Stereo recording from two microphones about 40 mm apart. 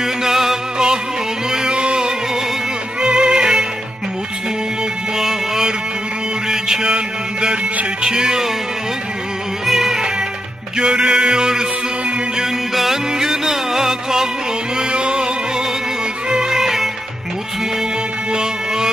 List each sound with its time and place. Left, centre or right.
0.0 s music: centre
1.5 s a sound: right
3.0 s music: centre
5.1 s music: centre
6.5 s mantra: centre
8.0 s music: centre
9.7 s music: centre
10.8 s music: right
12.7 s music: centre
14.8 s music: right
16.3 s music: centre
18.3 s a sound: centre